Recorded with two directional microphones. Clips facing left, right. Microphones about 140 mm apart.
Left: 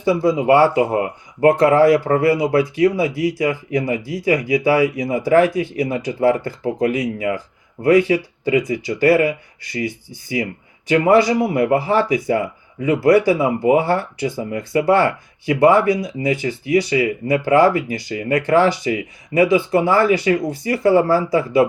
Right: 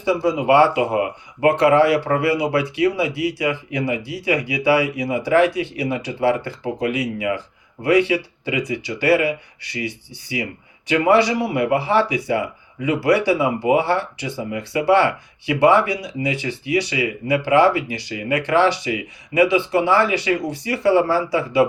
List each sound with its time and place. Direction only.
0.0 s speech: 45° left (ahead or behind)